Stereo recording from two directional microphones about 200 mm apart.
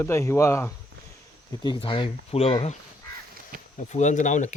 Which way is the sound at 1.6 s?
25° left (ahead or behind).